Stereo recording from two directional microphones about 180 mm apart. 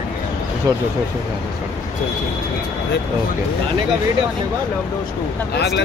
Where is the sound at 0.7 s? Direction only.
20° right (ahead or behind).